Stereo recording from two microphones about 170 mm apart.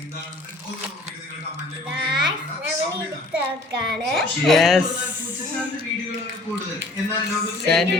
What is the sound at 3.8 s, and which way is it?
Speech, centre (ahead or behind).